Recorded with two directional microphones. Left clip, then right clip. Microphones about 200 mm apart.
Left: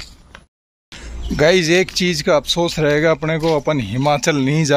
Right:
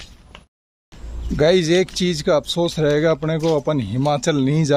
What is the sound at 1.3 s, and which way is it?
Speech, centre (ahead or behind).